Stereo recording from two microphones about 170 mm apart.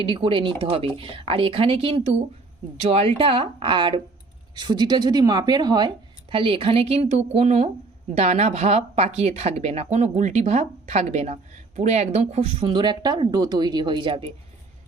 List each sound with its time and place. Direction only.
0.0 s speech: 30° right (ahead or behind)